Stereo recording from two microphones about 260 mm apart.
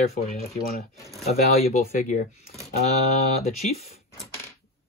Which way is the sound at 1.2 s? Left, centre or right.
Left.